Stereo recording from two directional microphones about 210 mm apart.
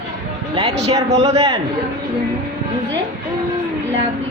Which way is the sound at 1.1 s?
30° right (ahead or behind).